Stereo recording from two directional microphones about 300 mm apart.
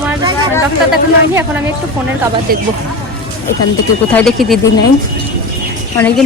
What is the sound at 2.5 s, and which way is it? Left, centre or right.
Speech, right.